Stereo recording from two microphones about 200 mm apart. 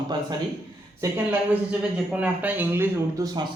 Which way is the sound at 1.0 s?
10° right (ahead or behind).